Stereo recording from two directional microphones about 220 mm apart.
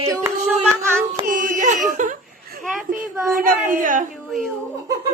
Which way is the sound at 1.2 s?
35° right (ahead or behind).